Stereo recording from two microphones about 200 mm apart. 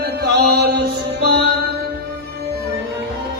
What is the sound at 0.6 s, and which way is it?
Music, 50° right (ahead or behind).